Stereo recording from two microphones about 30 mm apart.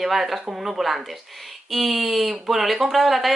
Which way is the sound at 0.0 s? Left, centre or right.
Centre.